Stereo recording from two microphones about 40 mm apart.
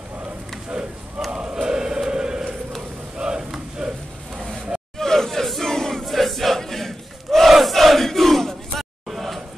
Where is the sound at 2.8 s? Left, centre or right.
Centre.